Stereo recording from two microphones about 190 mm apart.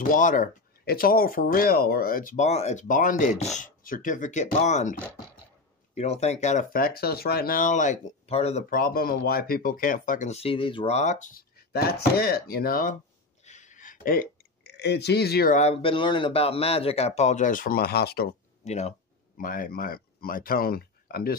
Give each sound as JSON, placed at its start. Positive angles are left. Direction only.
{"t": 0.0, "sound": "speech", "side_deg": 45}
{"t": 5.9, "sound": "speech", "side_deg": 35}
{"t": 8.6, "sound": "speech", "side_deg": 50}
{"t": 13.4, "sound": "a sound", "side_deg": 40}
{"t": 15.5, "sound": "speech", "side_deg": 35}
{"t": 18.6, "sound": "speech", "side_deg": 35}